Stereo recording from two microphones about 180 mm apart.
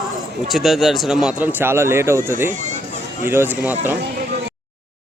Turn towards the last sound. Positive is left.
turn(degrees=-10)  # may be behind; listen again after turning